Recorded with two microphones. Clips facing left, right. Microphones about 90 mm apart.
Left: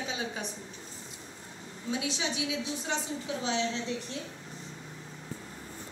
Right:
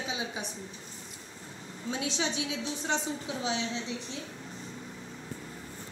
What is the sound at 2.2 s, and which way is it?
Speech, 35° right (ahead or behind).